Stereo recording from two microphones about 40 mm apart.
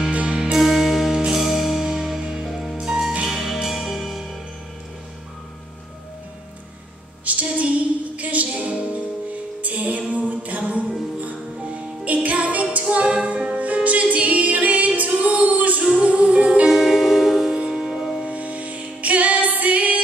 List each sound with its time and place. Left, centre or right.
0.3 s music: centre
0.6 s music: centre
1.1 s music: centre
1.4 s music: centre
2.5 s music: centre
2.8 s music: centre
7.2 s music: right
16.6 s music: centre
18.2 s music: right